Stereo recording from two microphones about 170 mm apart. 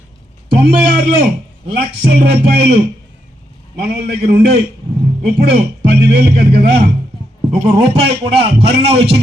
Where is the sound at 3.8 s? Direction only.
70° right (ahead or behind).